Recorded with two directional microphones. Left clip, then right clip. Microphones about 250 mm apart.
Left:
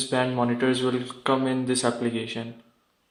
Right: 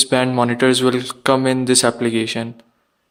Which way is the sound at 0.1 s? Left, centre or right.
Right.